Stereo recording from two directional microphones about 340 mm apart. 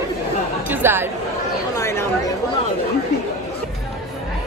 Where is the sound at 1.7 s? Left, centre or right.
Centre.